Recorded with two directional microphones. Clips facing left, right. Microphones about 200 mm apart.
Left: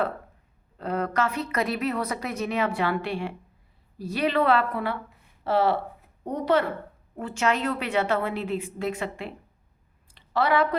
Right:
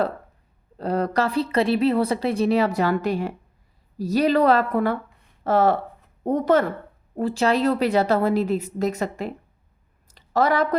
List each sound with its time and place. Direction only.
0.8 s a woman's voice: 35° right (ahead or behind)
7.2 s a woman's voice: 35° right (ahead or behind)
10.1 s a sound: 45° right (ahead or behind)